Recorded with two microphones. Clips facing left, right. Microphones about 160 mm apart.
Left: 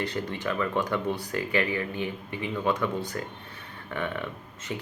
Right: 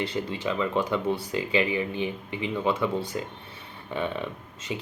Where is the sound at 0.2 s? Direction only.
15° right (ahead or behind).